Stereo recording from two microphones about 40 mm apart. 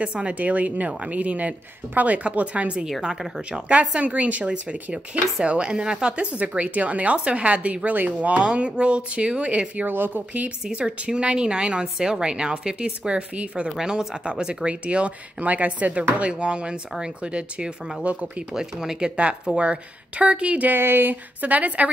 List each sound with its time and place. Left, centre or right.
0.0 s speech: right
0.3 s speech: right
3.2 s speech: centre
4.0 s speech: right
9.8 s a woman's voice: right
10.7 s speech: right
15.4 s speech: right
18.2 s speech: centre; by 20.6 s right
20.6 s a woman's voice: right